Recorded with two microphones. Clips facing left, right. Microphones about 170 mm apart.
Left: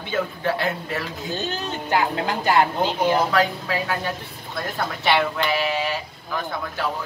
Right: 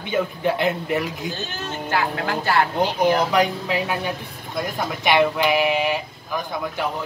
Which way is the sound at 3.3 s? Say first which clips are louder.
Right 1 dB; 20° right (ahead or behind).